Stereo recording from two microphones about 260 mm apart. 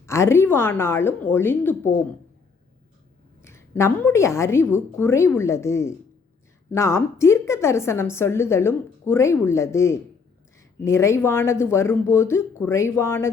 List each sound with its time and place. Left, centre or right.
0.0 s a woman's voice: centre
3.4 s a woman's voice: centre